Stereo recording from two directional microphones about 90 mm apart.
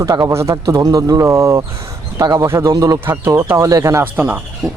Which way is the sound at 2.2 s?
45° right (ahead or behind).